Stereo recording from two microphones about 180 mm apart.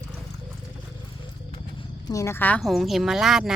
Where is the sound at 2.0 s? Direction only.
15° left (ahead or behind); by 3.5 s centre (ahead or behind).